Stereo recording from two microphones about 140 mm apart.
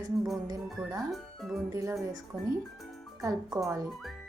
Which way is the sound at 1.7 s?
20° right (ahead or behind).